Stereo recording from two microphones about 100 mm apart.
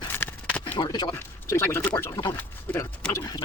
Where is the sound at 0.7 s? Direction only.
45° left (ahead or behind).